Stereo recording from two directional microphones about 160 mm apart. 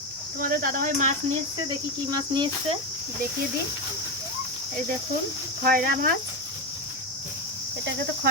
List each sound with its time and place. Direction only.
0.3 s speech: 65° right (ahead or behind)
2.0 s cricket: 25° right (ahead or behind)
5.6 s speech: 65° right (ahead or behind)